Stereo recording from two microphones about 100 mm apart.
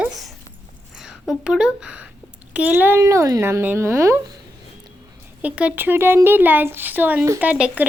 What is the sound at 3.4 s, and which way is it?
Speech, 20° right (ahead or behind).